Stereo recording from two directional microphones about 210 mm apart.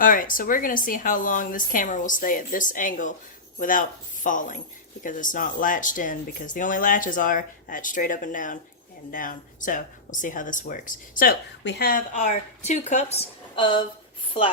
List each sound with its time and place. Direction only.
0.0 s speech: 40° left (ahead or behind); by 13.8 s 20° left (ahead or behind)